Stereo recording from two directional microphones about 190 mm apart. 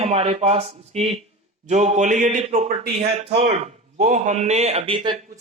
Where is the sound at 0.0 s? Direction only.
30° right (ahead or behind).